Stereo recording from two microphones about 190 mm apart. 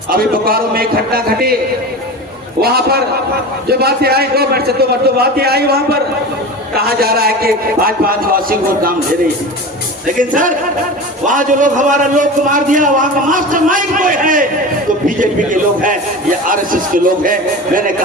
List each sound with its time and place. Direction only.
0.1 s a man's voice: 50° right (ahead or behind)
2.6 s a man's voice: 55° right (ahead or behind)
10.2 s a man's voice: 45° right (ahead or behind)